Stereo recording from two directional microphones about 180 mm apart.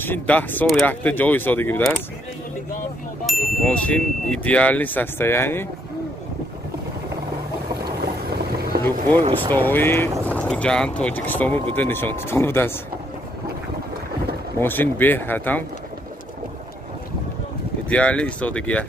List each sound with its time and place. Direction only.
0.0 s speech: 10° left (ahead or behind)
3.3 s speech: 5° left (ahead or behind)
7.8 s boat: 60° right (ahead or behind)
9.5 s speech: 10° left (ahead or behind)
14.6 s speech: 10° left (ahead or behind)
17.8 s speech: 5° left (ahead or behind)